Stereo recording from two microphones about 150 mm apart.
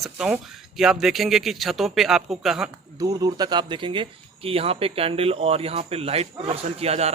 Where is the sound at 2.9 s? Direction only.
25° right (ahead or behind).